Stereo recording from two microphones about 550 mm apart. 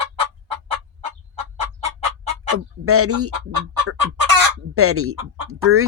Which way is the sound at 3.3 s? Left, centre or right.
Right.